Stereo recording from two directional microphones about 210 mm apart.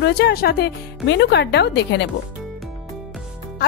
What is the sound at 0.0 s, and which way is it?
Speech, 55° left (ahead or behind).